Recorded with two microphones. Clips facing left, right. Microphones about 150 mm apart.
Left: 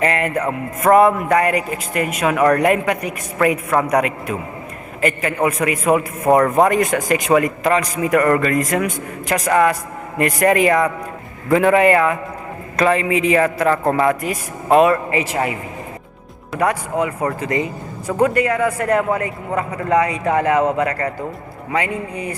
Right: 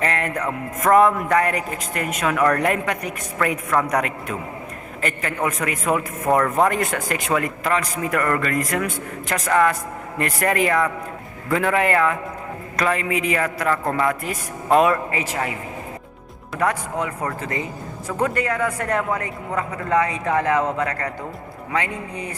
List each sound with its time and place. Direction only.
0.0 s music: 10° left (ahead or behind)
0.8 s a man's voice: 10° left (ahead or behind)
6.3 s a man's voice: 25° left (ahead or behind)
6.6 s a man's voice: 15° left (ahead or behind)
14.3 s a man's voice: 5° left (ahead or behind)
16.6 s a man's voice: 10° left (ahead or behind)
18.2 s a man's voice: 10° left (ahead or behind)